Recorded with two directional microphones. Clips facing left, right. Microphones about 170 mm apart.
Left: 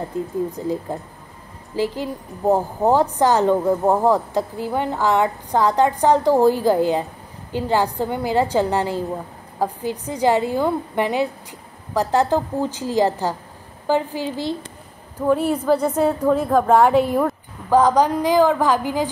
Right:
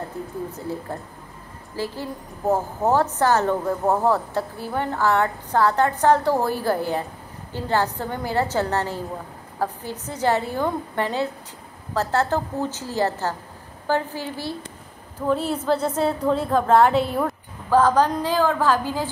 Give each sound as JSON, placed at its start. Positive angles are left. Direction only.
{"t": 0.5, "sound": "a woman's voice", "side_deg": 15}